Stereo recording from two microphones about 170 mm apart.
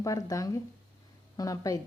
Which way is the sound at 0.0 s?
20° left (ahead or behind).